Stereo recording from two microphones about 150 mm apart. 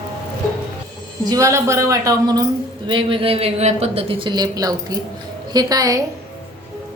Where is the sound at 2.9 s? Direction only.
35° right (ahead or behind).